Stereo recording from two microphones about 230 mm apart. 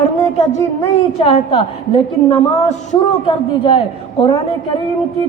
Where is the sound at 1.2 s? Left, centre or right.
Left.